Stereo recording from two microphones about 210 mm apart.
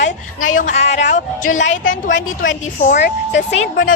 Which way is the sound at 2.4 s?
35° left (ahead or behind).